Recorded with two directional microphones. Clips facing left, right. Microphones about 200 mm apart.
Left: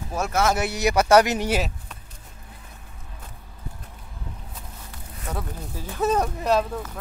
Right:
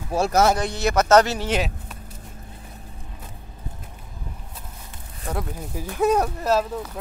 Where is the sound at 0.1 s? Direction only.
35° right (ahead or behind).